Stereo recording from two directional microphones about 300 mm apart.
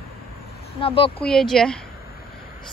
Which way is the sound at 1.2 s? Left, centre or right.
Centre.